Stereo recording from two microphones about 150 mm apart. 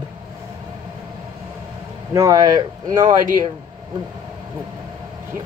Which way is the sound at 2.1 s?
25° right (ahead or behind).